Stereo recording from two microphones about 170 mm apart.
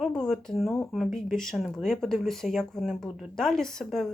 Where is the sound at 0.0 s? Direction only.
5° left (ahead or behind).